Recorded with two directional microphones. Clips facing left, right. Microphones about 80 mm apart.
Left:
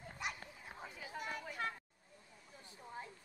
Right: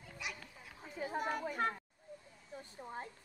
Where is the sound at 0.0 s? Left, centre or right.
Left.